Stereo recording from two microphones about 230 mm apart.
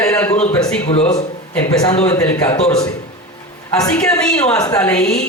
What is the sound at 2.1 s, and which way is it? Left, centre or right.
Speech, centre.